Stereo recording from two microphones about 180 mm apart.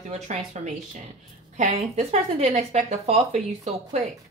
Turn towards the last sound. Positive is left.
turn(degrees=-40)  # may be behind; listen again after turning